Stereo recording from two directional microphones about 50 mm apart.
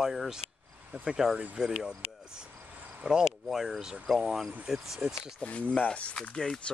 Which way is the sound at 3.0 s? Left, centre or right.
Centre.